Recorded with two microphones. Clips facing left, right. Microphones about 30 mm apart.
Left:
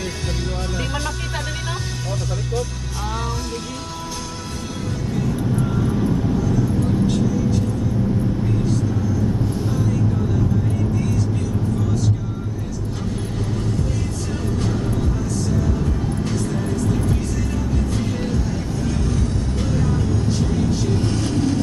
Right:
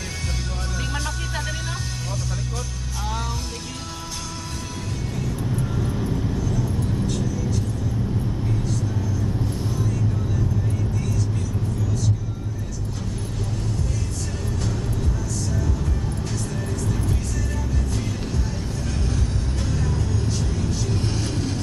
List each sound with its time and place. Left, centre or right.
5.7 s vehicle: centre
11.0 s vehicle: centre
14.6 s music: centre
19.6 s vehicle: centre
20.9 s vehicle: centre